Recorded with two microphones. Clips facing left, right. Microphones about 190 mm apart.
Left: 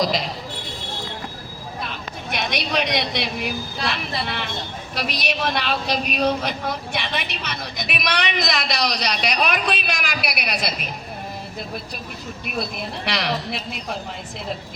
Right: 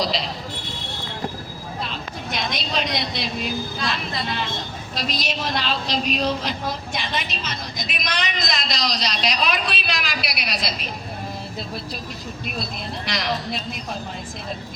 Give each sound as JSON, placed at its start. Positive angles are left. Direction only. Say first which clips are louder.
{"t": 2.3, "sound": "a woman's voice", "louder": "left 3 dB", "side_deg": 65}
{"t": 13.1, "sound": "a woman's voice", "louder": "left 1 dB", "side_deg": 65}